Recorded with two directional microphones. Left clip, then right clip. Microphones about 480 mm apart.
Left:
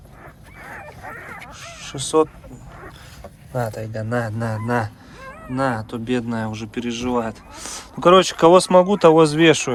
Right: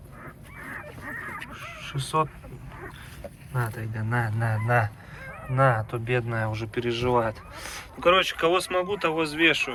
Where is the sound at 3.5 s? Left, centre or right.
Left.